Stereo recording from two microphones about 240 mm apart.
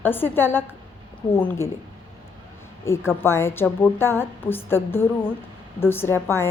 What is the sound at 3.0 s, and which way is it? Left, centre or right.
A woman's voice, centre.